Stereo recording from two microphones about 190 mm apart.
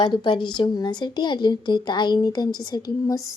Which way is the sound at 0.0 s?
25° left (ahead or behind).